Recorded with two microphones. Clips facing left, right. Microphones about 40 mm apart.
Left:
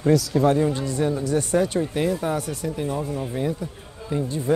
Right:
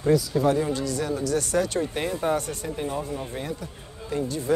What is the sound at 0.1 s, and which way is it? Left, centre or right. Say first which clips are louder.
Speech: left 2 dB; left.